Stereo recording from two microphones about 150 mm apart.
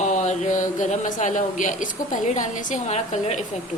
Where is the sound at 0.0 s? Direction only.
55° left (ahead or behind).